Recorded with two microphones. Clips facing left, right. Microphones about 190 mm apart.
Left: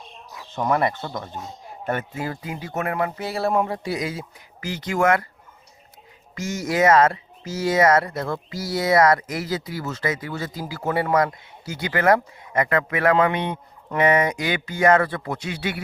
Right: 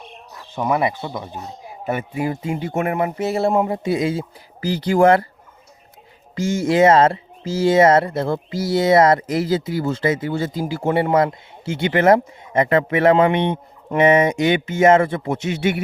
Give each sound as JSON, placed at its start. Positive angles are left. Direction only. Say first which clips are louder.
{"t": 0.5, "sound": "speech", "louder": "right 2 dB", "side_deg": -10}
{"t": 6.3, "sound": "speech", "louder": "right 7 dB", "side_deg": -30}